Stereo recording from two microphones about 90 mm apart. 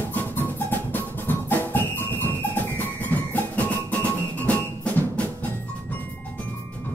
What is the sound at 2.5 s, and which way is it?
Music, 20° left (ahead or behind).